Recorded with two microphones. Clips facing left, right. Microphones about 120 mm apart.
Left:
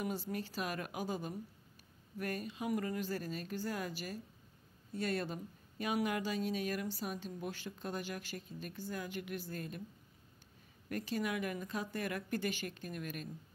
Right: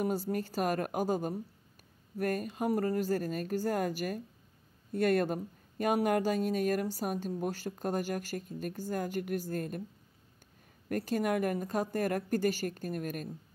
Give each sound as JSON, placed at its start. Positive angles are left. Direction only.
{"t": 0.0, "sound": "speech", "side_deg": -45}
{"t": 10.9, "sound": "speech", "side_deg": -45}